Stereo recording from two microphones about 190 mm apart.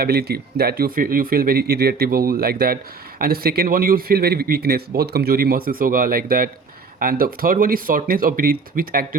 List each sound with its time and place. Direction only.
0.0 s a man's voice: 55° right (ahead or behind)